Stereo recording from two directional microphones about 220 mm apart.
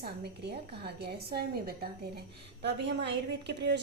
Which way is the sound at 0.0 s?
45° right (ahead or behind).